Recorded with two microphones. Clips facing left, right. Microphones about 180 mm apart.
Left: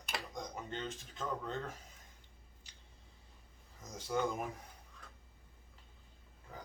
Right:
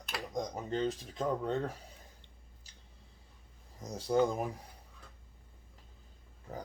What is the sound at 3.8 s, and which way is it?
Speech, 35° right (ahead or behind).